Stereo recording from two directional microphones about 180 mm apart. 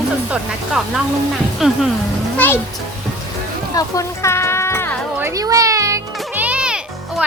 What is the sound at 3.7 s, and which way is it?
Music, 20° left (ahead or behind).